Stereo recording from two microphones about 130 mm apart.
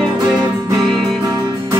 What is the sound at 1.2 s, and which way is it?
Music, 25° right (ahead or behind).